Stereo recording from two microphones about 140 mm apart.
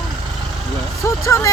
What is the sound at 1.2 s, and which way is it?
Speech, 20° left (ahead or behind).